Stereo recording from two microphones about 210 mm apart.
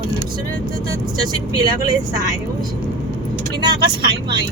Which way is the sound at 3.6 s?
20° right (ahead or behind).